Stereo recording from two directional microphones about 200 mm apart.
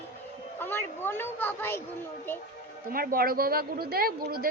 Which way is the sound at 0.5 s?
10° left (ahead or behind).